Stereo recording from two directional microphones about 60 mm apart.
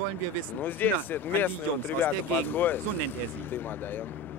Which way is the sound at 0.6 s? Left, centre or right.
Left.